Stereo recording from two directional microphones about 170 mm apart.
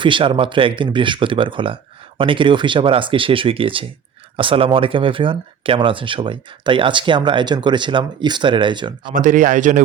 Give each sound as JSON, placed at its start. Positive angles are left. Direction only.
{"t": 0.0, "sound": "speech", "side_deg": -30}
{"t": 9.1, "sound": "speech", "side_deg": -50}